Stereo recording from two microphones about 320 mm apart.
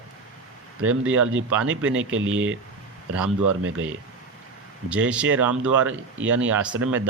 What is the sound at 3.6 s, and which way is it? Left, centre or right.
Speech, right.